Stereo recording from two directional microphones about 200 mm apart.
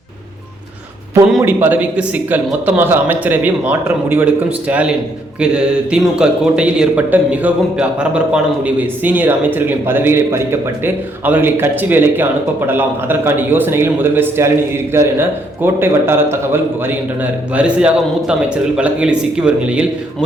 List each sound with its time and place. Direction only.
1.4 s speech: 10° right (ahead or behind)